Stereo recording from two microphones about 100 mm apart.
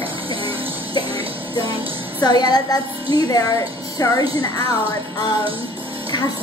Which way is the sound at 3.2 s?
40° left (ahead or behind).